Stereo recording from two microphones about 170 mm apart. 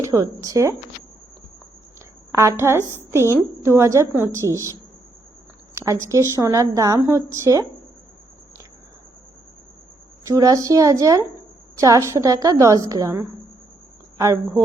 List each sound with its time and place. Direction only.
0.0 s a woman's voice: 15° right (ahead or behind)
2.3 s a woman's voice: 15° right (ahead or behind)
5.7 s a sound: 20° right (ahead or behind)
6.1 s speech: 20° right (ahead or behind)
10.2 s speech: 20° right (ahead or behind)